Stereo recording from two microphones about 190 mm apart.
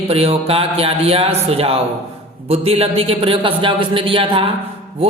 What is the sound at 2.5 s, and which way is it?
A man's voice, 30° right (ahead or behind).